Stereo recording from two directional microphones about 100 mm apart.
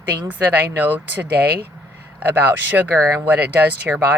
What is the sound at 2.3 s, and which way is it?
Speech, 20° right (ahead or behind).